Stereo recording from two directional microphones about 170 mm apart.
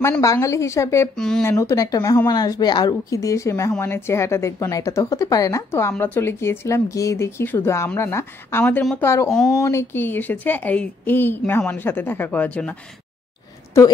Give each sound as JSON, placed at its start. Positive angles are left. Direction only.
{"t": 0.0, "sound": "speech", "side_deg": 15}
{"t": 1.1, "sound": "speech", "side_deg": 5}
{"t": 1.4, "sound": "a woman's voice", "side_deg": 15}
{"t": 13.7, "sound": "speech", "side_deg": 15}